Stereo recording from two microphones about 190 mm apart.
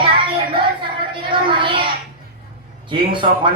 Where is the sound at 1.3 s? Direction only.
25° right (ahead or behind).